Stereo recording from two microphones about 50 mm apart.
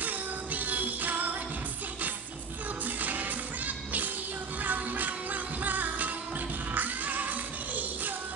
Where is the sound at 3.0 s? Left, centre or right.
Right.